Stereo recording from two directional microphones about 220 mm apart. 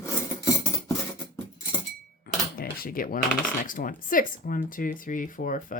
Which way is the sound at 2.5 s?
40° left (ahead or behind).